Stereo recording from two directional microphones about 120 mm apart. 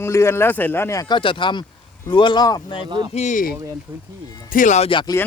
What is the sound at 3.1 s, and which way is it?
Speech, 80° left.